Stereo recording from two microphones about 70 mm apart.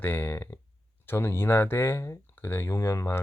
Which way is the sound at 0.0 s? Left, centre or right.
Left.